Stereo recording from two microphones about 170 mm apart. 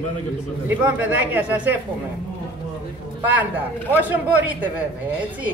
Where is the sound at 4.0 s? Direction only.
10° right (ahead or behind).